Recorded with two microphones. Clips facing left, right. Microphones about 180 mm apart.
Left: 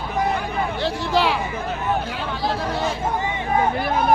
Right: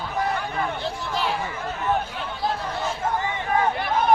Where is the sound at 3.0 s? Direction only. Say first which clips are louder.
Left 2 dB; 20° left (ahead or behind).